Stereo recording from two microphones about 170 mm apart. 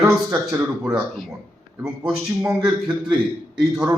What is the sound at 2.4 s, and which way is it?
Speech, 20° right (ahead or behind).